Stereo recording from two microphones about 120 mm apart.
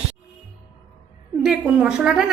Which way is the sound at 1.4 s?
10° right (ahead or behind).